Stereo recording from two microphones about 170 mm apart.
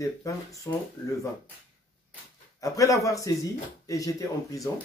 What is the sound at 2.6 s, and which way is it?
Speech, 20° left (ahead or behind).